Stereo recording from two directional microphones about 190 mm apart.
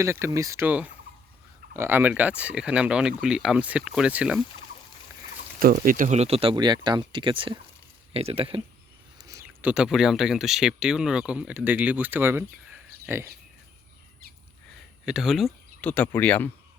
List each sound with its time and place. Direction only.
0.0 s speech: 15° right (ahead or behind)
5.5 s speech: 50° right (ahead or behind); by 8.6 s 30° right (ahead or behind)
9.1 s speech: 20° right (ahead or behind)
15.0 s speech: centre (ahead or behind)